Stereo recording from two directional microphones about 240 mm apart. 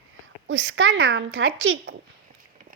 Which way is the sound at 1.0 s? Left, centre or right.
Right.